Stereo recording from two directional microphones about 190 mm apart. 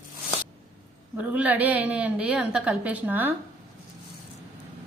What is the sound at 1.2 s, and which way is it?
A woman's voice, 5° right (ahead or behind).